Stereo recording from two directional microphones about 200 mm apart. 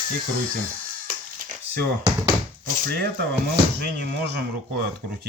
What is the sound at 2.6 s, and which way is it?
Speech, 55° right (ahead or behind).